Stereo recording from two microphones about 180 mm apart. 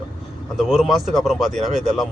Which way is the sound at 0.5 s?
Centre (ahead or behind).